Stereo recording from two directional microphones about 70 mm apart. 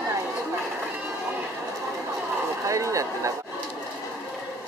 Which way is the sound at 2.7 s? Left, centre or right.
Right.